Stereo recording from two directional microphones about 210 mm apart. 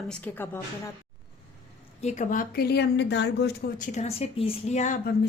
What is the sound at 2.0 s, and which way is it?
Speech, 35° left (ahead or behind).